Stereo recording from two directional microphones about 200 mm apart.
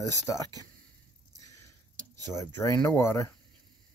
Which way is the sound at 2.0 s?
20° right (ahead or behind).